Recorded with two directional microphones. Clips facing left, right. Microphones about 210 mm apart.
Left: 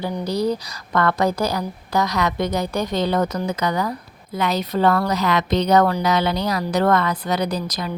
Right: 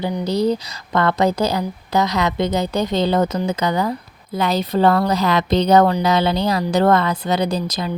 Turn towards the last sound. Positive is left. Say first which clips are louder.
# right 3 dB
turn(degrees=-25)  # may be behind; listen again after turning